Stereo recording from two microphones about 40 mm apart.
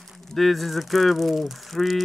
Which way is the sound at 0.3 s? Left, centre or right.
Centre.